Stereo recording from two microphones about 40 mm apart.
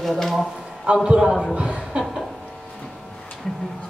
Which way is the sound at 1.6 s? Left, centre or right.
Right.